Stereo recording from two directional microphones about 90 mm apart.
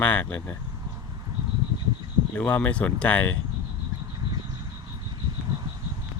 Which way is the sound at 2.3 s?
15° left (ahead or behind).